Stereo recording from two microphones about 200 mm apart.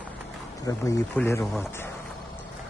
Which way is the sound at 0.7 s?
15° left (ahead or behind).